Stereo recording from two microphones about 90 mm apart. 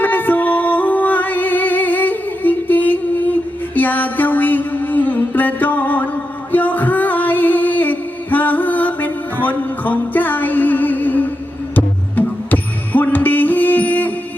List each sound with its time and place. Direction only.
0.0 s music: 20° left (ahead or behind)